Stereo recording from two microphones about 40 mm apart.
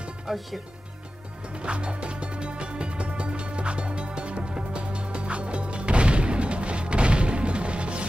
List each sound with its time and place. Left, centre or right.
0.3 s speech: centre
1.6 s music: right